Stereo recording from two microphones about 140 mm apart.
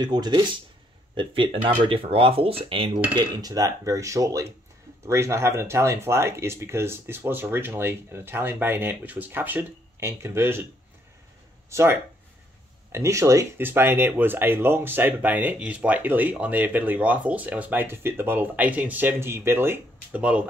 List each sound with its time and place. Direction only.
0.0 s speech: 30° right (ahead or behind)
1.9 s cutlery: 40° right (ahead or behind)
3.2 s speech: 25° right (ahead or behind)
11.7 s speech: 20° right (ahead or behind)